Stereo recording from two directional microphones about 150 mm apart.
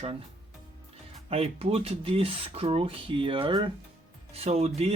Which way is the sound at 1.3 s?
40° right (ahead or behind).